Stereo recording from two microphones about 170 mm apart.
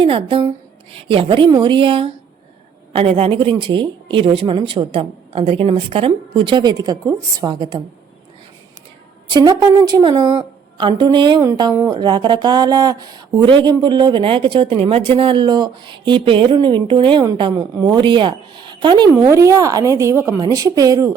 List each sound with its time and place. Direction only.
0.0 s speech: 30° right (ahead or behind)
9.3 s speech: 25° right (ahead or behind)